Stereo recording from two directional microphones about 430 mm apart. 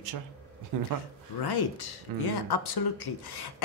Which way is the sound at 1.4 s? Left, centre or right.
Left.